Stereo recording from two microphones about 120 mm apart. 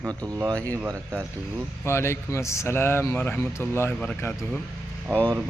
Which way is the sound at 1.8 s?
20° left (ahead or behind).